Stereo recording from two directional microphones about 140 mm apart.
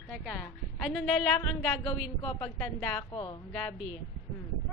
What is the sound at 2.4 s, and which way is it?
A woman's voice, 10° left (ahead or behind).